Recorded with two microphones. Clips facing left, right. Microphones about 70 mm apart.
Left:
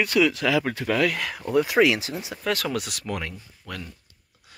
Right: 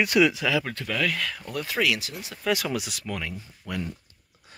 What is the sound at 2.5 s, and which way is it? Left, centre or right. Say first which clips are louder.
Speech: even; centre.